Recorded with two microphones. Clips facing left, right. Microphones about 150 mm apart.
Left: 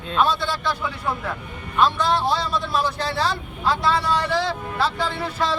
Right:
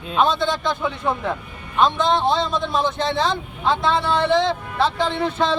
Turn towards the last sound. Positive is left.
turn(degrees=-25)  # may be behind; listen again after turning